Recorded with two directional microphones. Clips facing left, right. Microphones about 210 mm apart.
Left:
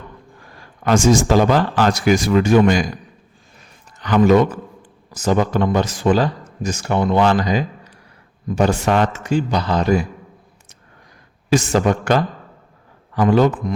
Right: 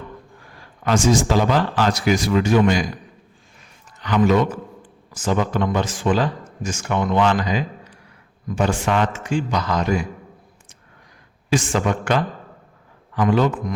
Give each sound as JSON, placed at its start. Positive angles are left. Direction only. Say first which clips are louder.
{"t": 0.9, "sound": "speech", "louder": "left 3 dB", "side_deg": 45}
{"t": 4.0, "sound": "speech", "louder": "left 4 dB", "side_deg": 45}
{"t": 11.4, "sound": "speech", "louder": "left 4 dB", "side_deg": 40}